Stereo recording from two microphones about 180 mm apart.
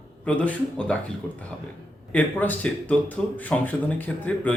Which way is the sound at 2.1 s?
10° left (ahead or behind).